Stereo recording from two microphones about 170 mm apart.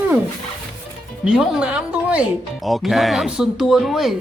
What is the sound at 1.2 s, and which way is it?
Speech, 5° right (ahead or behind).